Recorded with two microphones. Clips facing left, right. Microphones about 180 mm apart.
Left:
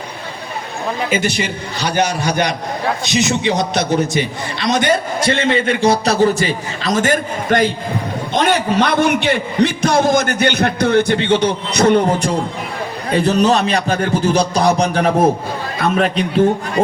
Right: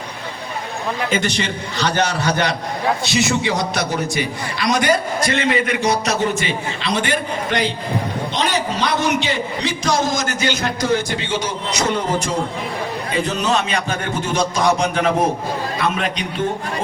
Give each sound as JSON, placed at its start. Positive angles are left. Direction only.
{"t": 1.1, "sound": "a man's voice", "side_deg": 10}
{"t": 13.1, "sound": "a man's voice", "side_deg": 35}